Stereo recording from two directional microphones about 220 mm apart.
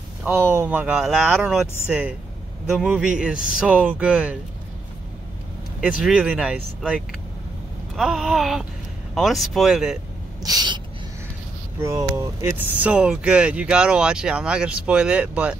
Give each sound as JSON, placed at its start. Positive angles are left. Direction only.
{"t": 0.2, "sound": "speech", "side_deg": -10}
{"t": 5.8, "sound": "speech", "side_deg": -5}
{"t": 10.4, "sound": "gasp", "side_deg": -20}
{"t": 11.8, "sound": "speech", "side_deg": -15}